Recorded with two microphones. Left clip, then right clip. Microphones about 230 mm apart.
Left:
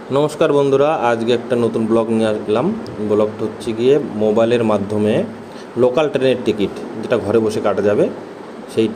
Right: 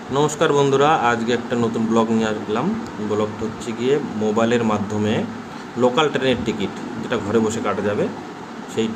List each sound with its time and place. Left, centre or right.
0.1 s a man's voice: centre
3.7 s a man's voice: centre